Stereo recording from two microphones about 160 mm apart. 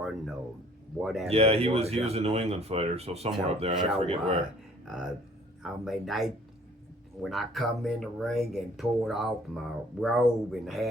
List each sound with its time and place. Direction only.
0.9 s speech: centre (ahead or behind)
1.3 s speech: 40° right (ahead or behind)
4.9 s speech: centre (ahead or behind)